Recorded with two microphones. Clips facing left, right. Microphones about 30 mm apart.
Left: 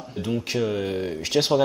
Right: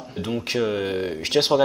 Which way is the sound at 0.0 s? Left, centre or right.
Centre.